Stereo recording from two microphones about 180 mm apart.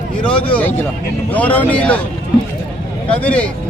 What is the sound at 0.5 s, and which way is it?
Speech, 10° left (ahead or behind).